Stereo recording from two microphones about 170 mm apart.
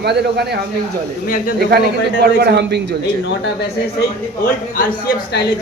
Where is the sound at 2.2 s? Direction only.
75° right (ahead or behind).